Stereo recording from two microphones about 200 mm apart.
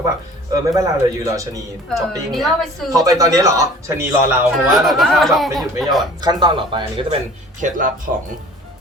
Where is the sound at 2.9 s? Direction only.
15° right (ahead or behind).